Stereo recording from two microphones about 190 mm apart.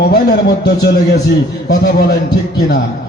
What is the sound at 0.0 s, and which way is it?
A man's voice, 60° left (ahead or behind).